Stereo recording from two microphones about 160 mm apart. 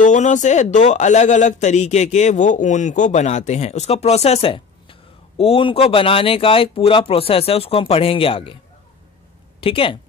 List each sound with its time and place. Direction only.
0.0 s speech: 50° left (ahead or behind); by 8.5 s 35° left (ahead or behind)
9.6 s speech: 35° left (ahead or behind)